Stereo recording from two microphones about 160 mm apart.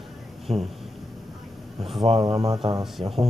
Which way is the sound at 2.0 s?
35° right (ahead or behind).